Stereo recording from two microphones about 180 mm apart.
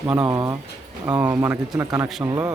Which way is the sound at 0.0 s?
15° right (ahead or behind).